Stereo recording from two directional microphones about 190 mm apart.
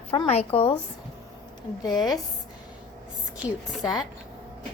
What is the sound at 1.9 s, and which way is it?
Speech, centre (ahead or behind).